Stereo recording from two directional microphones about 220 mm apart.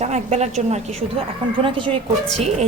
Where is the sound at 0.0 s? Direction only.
30° right (ahead or behind).